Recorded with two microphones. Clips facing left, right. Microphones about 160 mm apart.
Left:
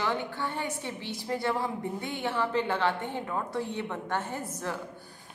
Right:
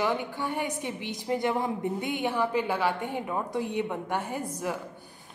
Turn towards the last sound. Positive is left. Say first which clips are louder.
# right 3 dB
turn(degrees=-15)  # may be behind; listen again after turning